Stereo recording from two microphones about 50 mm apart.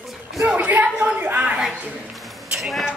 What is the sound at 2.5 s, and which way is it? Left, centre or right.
Speech, centre.